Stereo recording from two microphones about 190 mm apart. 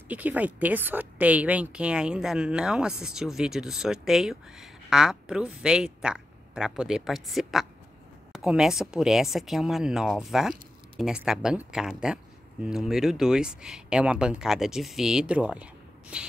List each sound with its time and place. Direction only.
0.1 s speech: 10° right (ahead or behind)